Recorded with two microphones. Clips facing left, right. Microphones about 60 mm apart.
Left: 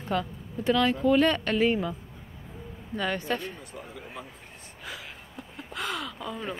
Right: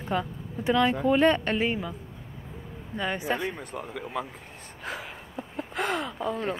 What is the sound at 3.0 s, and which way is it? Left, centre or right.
Speech, centre.